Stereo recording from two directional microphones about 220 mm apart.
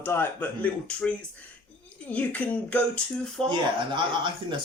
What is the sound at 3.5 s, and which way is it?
Speech, 20° right (ahead or behind).